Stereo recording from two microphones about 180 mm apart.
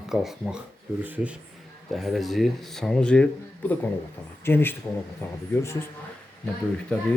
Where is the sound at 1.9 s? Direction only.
Centre (ahead or behind).